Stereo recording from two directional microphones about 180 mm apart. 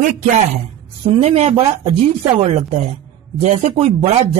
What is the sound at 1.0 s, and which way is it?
Speech, 30° right (ahead or behind).